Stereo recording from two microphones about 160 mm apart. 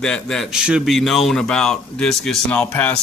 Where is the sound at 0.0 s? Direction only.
5° left (ahead or behind).